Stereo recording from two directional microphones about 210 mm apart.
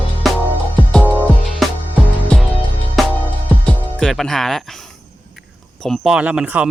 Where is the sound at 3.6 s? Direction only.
5° left (ahead or behind).